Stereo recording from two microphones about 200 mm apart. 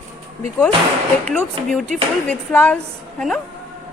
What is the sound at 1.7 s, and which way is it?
Speech, 5° left (ahead or behind).